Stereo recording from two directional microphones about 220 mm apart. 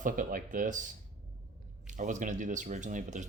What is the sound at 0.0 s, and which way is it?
Speech, 40° right (ahead or behind).